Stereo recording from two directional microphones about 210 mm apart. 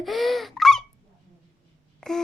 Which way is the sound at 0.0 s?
Centre (ahead or behind).